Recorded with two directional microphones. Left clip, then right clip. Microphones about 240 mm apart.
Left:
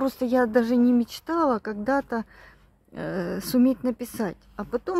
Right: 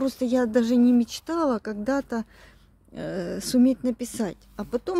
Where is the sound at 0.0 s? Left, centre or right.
Centre.